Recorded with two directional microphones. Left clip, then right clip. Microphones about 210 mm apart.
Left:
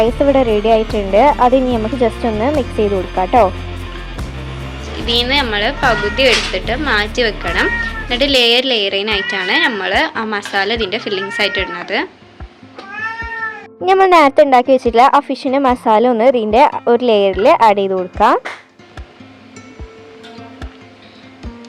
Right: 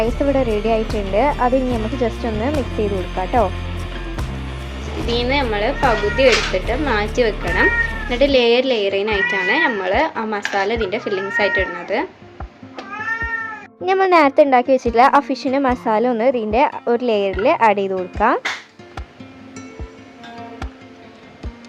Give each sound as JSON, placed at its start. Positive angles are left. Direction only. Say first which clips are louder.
{"t": 0.0, "sound": "speech", "louder": "left 6 dB", "side_deg": 15}
{"t": 4.7, "sound": "speech", "louder": "left 5 dB", "side_deg": -5}
{"t": 13.8, "sound": "speech", "louder": "left 5 dB", "side_deg": 15}